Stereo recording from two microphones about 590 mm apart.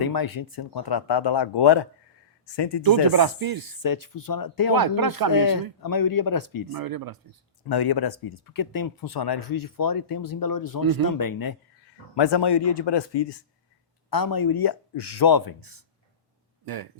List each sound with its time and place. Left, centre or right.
0.0 s speech: left
2.8 s snake: right
3.8 s speech: left
4.7 s snake: right
5.3 s speech: left
6.7 s snake: right
7.7 s speech: left